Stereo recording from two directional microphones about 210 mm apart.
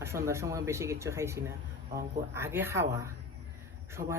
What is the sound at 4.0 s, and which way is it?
Speech, 35° right (ahead or behind).